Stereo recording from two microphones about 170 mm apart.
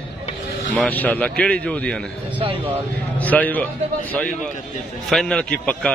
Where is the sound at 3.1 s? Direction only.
10° left (ahead or behind).